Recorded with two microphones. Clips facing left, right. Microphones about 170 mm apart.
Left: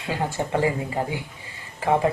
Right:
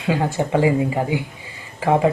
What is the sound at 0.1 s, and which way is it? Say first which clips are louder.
Speech: right 6 dB; 15° right (ahead or behind).